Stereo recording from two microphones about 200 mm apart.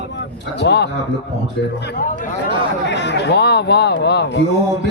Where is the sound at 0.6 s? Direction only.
55° left (ahead or behind).